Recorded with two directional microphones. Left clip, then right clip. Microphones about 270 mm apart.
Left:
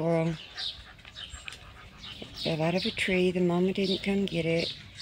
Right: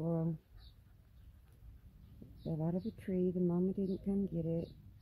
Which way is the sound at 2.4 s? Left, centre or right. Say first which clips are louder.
Left 13 dB; centre.